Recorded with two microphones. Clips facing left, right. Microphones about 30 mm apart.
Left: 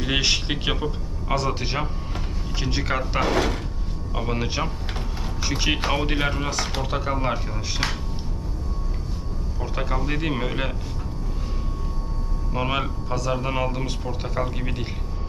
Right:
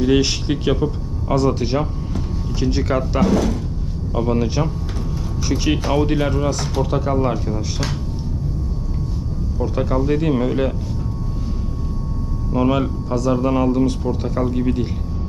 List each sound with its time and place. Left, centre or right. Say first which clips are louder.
0.0 s speech: right 6 dB; centre
3.3 s speech: right 4 dB; left
4.1 s speech: right 7 dB; centre
9.6 s speech: right 8 dB; centre
12.5 s speech: right 7 dB; centre